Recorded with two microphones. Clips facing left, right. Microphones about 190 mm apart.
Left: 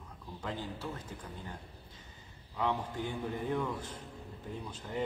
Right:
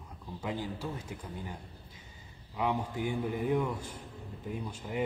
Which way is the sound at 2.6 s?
10° right (ahead or behind).